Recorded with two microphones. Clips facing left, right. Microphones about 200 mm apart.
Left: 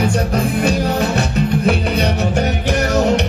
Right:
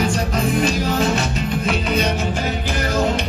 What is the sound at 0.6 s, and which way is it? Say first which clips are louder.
Music: left 2 dB; 60° left (ahead or behind).